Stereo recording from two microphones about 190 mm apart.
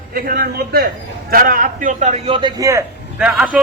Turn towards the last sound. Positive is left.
turn(degrees=-5)  # may be behind; listen again after turning